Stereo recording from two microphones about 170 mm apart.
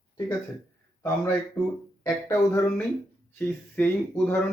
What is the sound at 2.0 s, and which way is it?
Speech, 15° left (ahead or behind).